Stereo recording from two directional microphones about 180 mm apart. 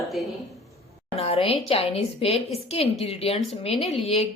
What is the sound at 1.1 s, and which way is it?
A woman's voice, 35° left (ahead or behind).